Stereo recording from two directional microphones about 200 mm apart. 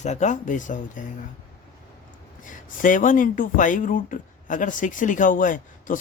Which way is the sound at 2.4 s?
40° left (ahead or behind).